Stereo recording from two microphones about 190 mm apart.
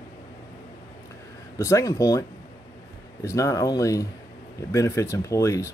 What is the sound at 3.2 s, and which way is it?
Speech, 15° left (ahead or behind).